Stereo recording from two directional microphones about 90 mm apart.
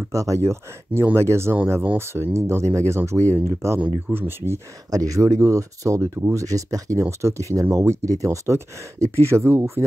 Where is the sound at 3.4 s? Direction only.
30° right (ahead or behind).